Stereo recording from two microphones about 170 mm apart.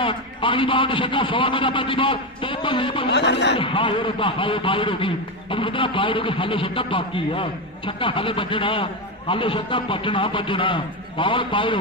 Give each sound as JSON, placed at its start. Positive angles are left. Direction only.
{"t": 0.0, "sound": "a man's voice", "side_deg": 30}
{"t": 3.1, "sound": "a man's voice", "side_deg": 90}
{"t": 3.5, "sound": "a man's voice", "side_deg": 30}